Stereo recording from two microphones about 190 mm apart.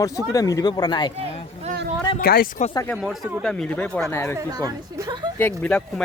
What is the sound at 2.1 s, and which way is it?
Speech, 50° left (ahead or behind).